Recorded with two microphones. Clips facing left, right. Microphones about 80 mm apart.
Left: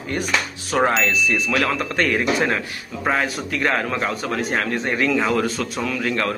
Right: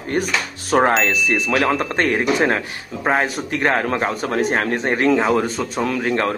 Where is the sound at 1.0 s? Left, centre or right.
Right.